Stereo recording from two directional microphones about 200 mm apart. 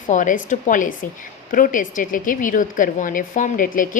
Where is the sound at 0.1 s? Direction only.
40° left (ahead or behind).